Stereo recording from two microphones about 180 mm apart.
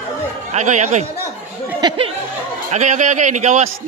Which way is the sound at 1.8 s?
30° right (ahead or behind).